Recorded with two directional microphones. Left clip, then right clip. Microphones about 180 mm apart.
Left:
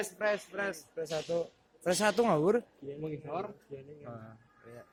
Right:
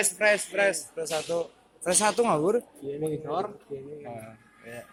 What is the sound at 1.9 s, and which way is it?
Speech, 30° left (ahead or behind).